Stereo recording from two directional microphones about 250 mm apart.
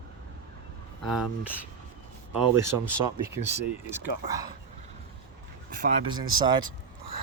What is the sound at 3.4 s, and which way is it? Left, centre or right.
Speech, centre.